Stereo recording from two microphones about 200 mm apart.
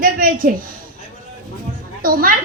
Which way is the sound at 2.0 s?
45° right (ahead or behind).